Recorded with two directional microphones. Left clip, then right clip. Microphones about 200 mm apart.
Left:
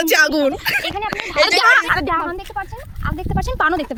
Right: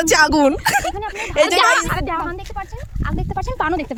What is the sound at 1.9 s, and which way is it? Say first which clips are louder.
Speech: left 5 dB; 30° left (ahead or behind).